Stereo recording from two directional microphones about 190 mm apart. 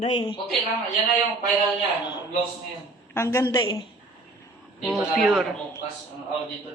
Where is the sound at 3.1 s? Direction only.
15° left (ahead or behind).